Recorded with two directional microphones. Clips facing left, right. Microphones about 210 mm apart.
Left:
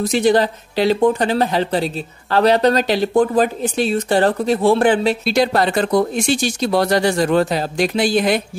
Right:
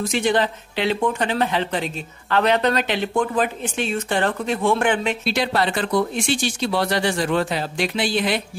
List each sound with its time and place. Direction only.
0.0 s speech: 35° left (ahead or behind)